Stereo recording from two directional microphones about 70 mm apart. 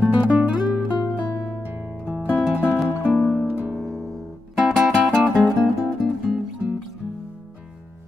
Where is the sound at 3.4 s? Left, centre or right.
Right.